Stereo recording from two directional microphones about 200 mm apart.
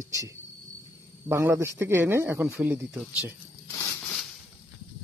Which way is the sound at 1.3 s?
10° right (ahead or behind).